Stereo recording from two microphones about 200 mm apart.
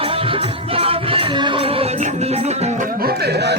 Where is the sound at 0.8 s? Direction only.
25° right (ahead or behind).